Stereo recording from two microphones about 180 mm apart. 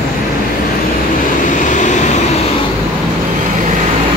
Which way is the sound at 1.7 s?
45° left (ahead or behind).